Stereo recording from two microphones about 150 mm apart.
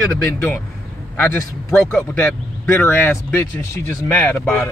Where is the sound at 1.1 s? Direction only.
15° left (ahead or behind).